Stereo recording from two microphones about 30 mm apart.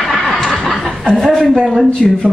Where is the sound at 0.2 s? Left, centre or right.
Centre.